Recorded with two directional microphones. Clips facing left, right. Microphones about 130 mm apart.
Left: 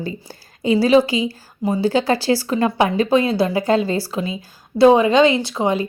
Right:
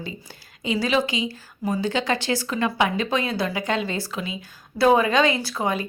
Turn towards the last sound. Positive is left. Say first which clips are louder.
# left 6 dB
turn(degrees=25)  # may be behind; listen again after turning